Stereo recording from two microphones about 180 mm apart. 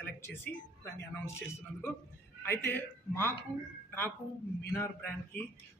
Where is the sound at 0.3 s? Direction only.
10° left (ahead or behind).